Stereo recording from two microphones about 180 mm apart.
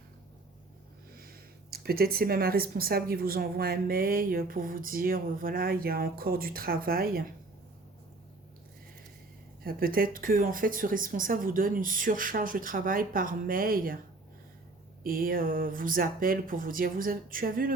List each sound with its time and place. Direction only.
1.1 s speech: 55° right (ahead or behind)
9.6 s speech: 55° right (ahead or behind)
15.0 s speech: 55° right (ahead or behind)